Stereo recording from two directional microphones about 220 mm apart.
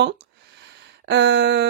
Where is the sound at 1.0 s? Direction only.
50° right (ahead or behind).